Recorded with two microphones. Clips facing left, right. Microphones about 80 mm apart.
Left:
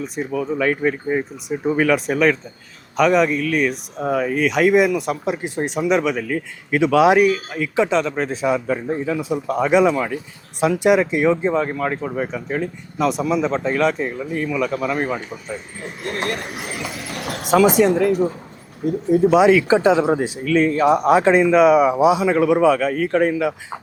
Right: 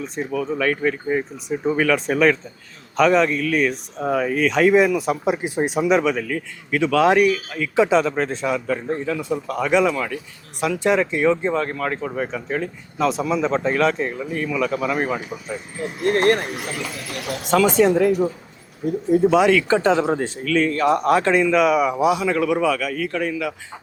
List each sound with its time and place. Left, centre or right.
0.0 s speech: centre
6.3 s speech: centre
7.8 s speech: centre
8.4 s speech: centre
16.0 s speech: right
16.7 s a sound: left
17.5 s speech: centre
17.8 s speech: centre
19.3 s speech: centre